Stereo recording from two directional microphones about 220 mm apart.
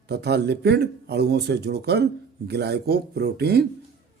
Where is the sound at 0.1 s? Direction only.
50° right (ahead or behind).